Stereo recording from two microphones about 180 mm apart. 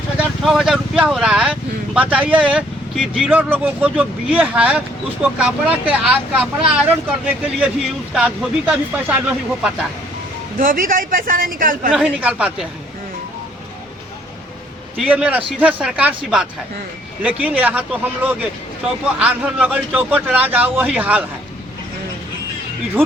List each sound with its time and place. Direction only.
0.4 s a man's voice: centre (ahead or behind)
10.6 s speech: 50° right (ahead or behind)
11.9 s a man's voice: 5° right (ahead or behind)
14.9 s a man's voice: 5° right (ahead or behind)